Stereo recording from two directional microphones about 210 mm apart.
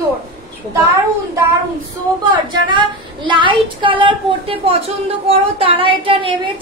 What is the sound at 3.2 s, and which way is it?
A woman's voice, 20° right (ahead or behind).